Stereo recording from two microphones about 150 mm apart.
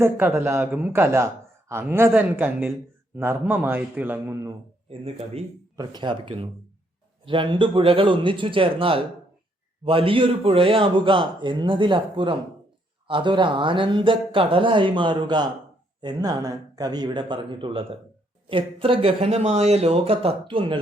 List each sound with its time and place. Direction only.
0.0 s a man's voice: 15° right (ahead or behind)
4.9 s a man's voice: 40° right (ahead or behind)
5.7 s a man's voice: 25° right (ahead or behind)